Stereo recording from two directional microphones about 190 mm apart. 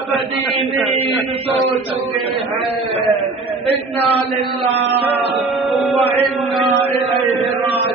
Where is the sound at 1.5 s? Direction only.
35° right (ahead or behind).